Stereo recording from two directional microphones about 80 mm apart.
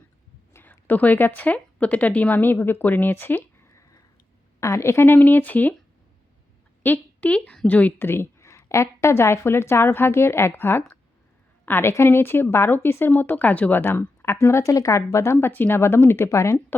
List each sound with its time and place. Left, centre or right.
0.5 s a woman's voice: left
3.8 s sniff: left
4.6 s a woman's voice: left
6.8 s a woman's voice: centre
14.3 s a woman's voice: left